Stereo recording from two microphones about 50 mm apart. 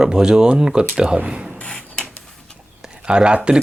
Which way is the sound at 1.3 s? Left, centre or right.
Centre.